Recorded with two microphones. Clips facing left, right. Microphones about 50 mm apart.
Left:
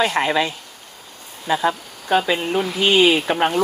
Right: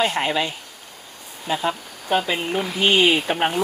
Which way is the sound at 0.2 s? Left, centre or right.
Left.